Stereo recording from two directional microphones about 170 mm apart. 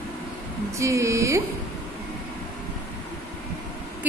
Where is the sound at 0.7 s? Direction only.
20° right (ahead or behind).